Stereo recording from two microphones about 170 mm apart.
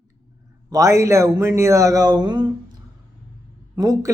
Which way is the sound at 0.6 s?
20° right (ahead or behind).